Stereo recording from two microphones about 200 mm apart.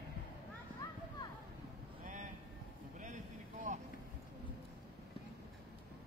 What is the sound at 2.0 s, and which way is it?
Vehicle, 40° right (ahead or behind).